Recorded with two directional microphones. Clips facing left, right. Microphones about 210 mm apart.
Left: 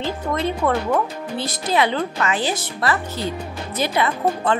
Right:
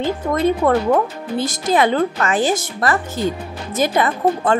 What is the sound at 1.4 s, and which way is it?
Speech, 45° right (ahead or behind).